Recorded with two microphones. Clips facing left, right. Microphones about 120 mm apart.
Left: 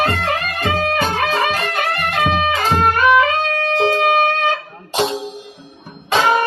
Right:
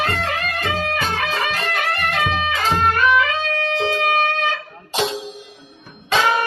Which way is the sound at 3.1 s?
45° left (ahead or behind).